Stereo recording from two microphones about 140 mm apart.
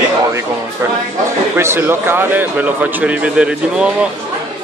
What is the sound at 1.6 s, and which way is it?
A man's voice, 15° right (ahead or behind).